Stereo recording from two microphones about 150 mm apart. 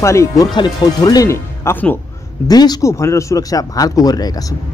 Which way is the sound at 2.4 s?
25° left (ahead or behind).